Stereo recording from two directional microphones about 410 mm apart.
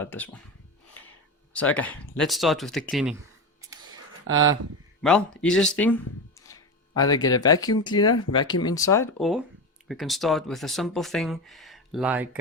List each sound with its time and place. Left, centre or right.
0.0 s speech: centre
1.5 s speech: centre
3.6 s a sound: centre
4.3 s speech: right
5.0 s speech: centre